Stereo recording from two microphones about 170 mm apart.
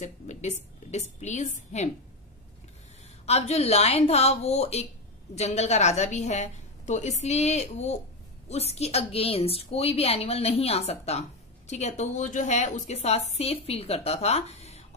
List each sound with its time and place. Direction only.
0.0 s a woman's voice: 45° left (ahead or behind)
3.3 s a woman's voice: 40° left (ahead or behind)